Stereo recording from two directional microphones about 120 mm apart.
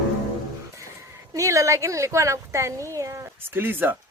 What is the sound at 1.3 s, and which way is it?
Speech, 25° right (ahead or behind).